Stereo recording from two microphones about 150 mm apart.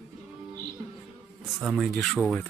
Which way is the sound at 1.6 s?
Centre (ahead or behind).